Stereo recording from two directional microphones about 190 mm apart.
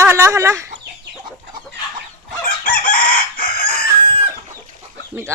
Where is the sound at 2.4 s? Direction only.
45° left (ahead or behind).